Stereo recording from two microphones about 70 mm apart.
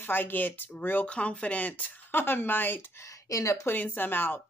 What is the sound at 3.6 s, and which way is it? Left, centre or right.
Speech, left.